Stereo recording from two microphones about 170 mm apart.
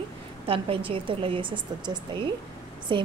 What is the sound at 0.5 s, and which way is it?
Speech, 30° right (ahead or behind).